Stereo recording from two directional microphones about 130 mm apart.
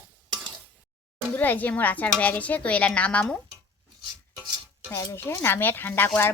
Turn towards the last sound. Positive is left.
turn(degrees=15)  # may be behind; listen again after turning